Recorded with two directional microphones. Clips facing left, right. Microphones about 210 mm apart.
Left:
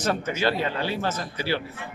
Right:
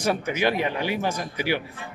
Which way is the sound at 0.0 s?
10° right (ahead or behind).